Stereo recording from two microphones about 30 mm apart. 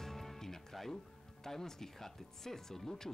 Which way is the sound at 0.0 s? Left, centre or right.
Centre.